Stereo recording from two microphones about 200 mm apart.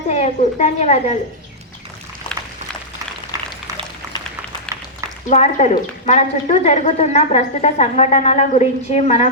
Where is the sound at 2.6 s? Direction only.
35° right (ahead or behind).